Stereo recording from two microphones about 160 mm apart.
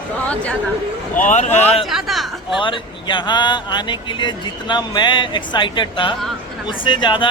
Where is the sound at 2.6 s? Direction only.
30° left (ahead or behind).